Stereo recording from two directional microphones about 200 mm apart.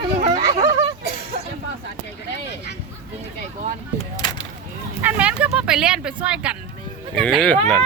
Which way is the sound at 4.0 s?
20° left (ahead or behind).